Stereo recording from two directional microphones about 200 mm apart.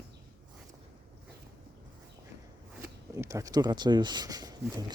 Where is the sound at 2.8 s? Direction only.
15° right (ahead or behind).